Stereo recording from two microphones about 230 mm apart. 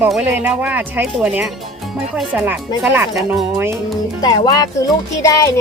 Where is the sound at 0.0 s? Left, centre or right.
Centre.